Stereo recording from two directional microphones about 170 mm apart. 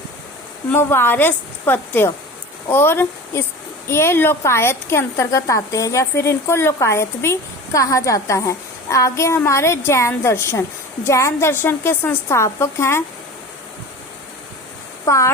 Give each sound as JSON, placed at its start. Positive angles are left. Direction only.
{"t": 0.7, "sound": "a woman's voice", "side_deg": 15}
{"t": 15.0, "sound": "speech", "side_deg": 15}